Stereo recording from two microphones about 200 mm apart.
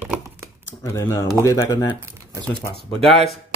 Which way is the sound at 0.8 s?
15° left (ahead or behind).